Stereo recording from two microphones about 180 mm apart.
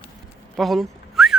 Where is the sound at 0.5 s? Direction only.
Centre (ahead or behind).